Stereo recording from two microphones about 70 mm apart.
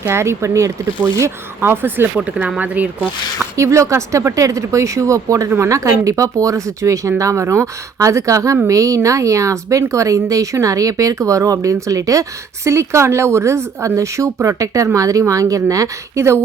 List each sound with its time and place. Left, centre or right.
0.0 s speech: right
1.6 s speech: right
2.1 s speech: centre
3.6 s speech: right